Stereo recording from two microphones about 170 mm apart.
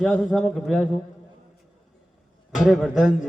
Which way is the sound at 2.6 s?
Centre (ahead or behind).